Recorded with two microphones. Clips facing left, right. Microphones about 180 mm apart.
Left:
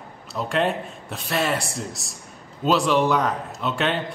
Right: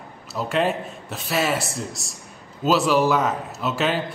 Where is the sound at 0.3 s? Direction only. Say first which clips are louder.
Right 1 dB; centre (ahead or behind).